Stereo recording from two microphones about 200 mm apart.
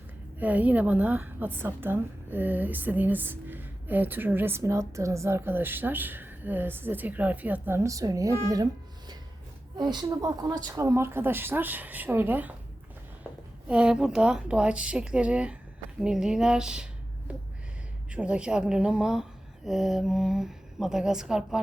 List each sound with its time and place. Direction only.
0.3 s a woman's voice: 5° right (ahead or behind)
13.7 s a woman's voice: 5° right (ahead or behind)